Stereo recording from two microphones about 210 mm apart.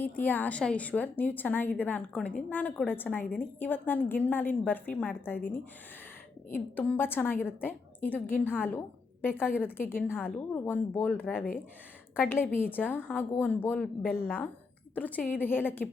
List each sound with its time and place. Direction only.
0.0 s a woman's voice: 10° left (ahead or behind)
6.7 s a woman's voice: 10° left (ahead or behind)